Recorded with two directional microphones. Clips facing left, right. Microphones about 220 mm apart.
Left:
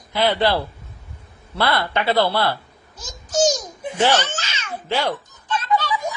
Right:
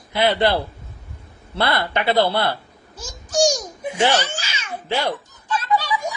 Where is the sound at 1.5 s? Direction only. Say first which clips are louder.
Even; 20° right (ahead or behind).